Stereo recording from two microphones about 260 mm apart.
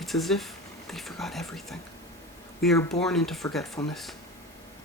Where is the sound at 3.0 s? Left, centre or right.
Centre.